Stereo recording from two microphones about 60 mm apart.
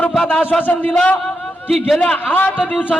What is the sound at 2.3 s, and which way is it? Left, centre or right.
Speech, left.